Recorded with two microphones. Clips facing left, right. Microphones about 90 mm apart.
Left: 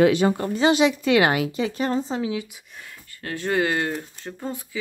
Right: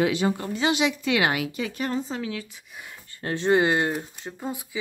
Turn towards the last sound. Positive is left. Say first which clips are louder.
# left 1 dB
turn(degrees=-10)  # may be behind; listen again after turning